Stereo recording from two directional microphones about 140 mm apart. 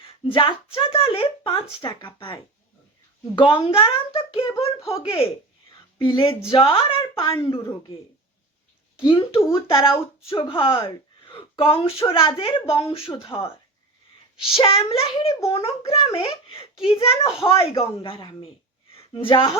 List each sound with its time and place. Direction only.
0.0 s speech: 40° left (ahead or behind)
9.0 s a woman's voice: 35° left (ahead or behind)